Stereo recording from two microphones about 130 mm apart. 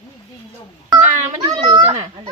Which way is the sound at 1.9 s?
50° right (ahead or behind).